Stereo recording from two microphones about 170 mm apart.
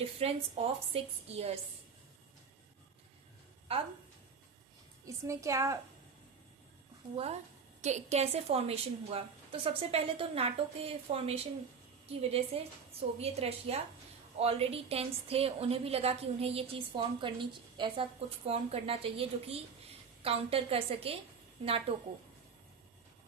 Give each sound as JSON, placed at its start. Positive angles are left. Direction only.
{"t": 0.0, "sound": "a woman's voice", "side_deg": -35}
{"t": 5.0, "sound": "a woman's voice", "side_deg": -20}
{"t": 7.8, "sound": "a woman's voice", "side_deg": -40}